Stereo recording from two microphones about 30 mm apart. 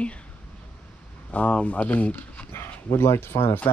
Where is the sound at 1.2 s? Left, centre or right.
Left.